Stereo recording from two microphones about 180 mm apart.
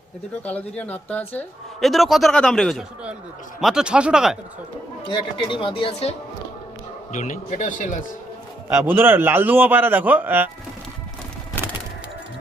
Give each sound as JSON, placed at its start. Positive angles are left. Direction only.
{"t": 0.4, "sound": "a man's voice", "side_deg": 10}
{"t": 5.4, "sound": "speech", "side_deg": 30}
{"t": 8.8, "sound": "a man's voice", "side_deg": -10}